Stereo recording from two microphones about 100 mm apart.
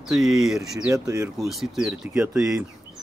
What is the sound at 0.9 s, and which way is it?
Speech, 35° right (ahead or behind).